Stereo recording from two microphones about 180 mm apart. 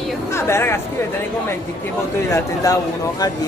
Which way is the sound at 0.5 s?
15° left (ahead or behind).